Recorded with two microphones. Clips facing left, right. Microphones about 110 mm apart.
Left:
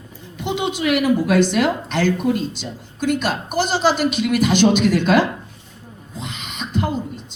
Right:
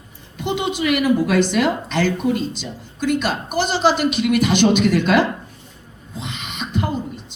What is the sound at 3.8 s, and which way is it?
Speech, 50° right (ahead or behind).